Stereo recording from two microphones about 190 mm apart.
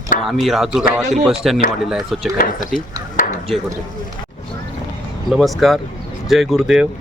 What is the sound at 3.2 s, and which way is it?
Chop, 45° left (ahead or behind).